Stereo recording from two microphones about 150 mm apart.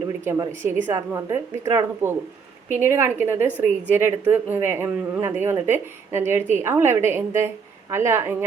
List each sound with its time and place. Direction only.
0.6 s a woman's voice: 15° right (ahead or behind)